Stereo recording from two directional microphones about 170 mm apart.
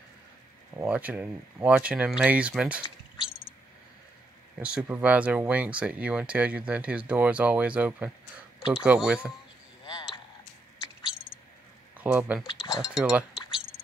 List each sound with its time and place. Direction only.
0.7 s speech: 10° right (ahead or behind)
4.6 s speech: 5° right (ahead or behind)
9.8 s a sound: 25° left (ahead or behind)
12.0 s speech: 10° right (ahead or behind)